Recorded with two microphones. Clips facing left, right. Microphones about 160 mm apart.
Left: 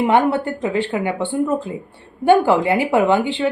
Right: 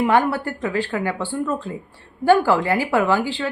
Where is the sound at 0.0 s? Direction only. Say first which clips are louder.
Left 2 dB; 20° left (ahead or behind).